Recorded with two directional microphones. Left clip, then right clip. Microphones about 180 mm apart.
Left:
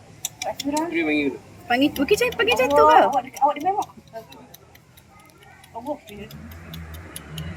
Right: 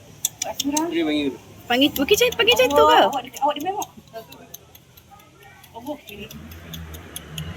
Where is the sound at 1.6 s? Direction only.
5° right (ahead or behind).